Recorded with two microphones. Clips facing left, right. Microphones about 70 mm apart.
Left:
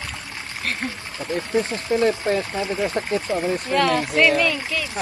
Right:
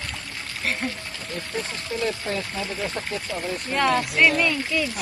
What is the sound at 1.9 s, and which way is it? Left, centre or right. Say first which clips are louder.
Speech: left 8 dB; left.